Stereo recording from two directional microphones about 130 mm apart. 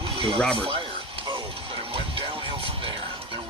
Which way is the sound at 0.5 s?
45° right (ahead or behind).